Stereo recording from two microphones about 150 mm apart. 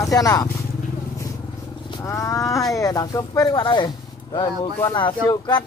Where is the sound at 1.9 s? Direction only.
20° left (ahead or behind).